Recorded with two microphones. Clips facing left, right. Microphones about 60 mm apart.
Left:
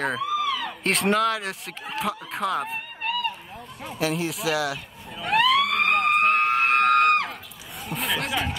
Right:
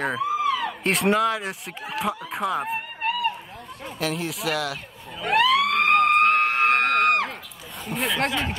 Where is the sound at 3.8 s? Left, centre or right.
Centre.